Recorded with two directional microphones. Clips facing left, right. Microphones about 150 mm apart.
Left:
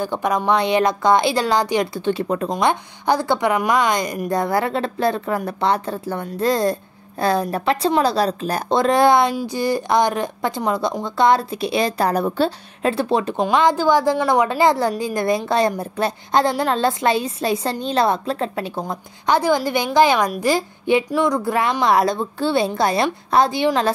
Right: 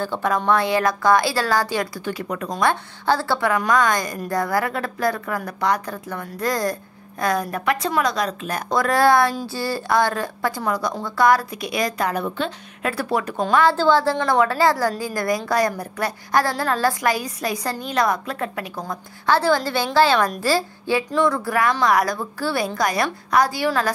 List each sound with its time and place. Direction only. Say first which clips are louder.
0.0 s a woman's voice: left 2 dB; 15° left (ahead or behind)
2.5 s a woman's voice: left 2 dB; 15° left (ahead or behind)